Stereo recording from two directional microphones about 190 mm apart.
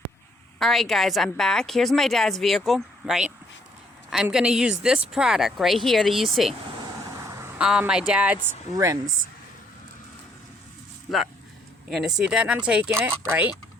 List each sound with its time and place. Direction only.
0.6 s a woman's voice: centre (ahead or behind)
7.2 s speech: 15° right (ahead or behind)
11.9 s a woman's voice: centre (ahead or behind)